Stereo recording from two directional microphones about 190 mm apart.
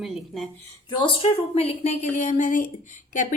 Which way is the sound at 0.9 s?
25° left (ahead or behind).